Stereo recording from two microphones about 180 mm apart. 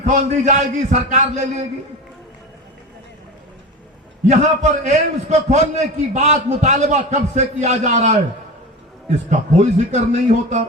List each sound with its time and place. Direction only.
0.0 s a man's voice: 40° right (ahead or behind)
4.3 s a man's voice: 40° right (ahead or behind)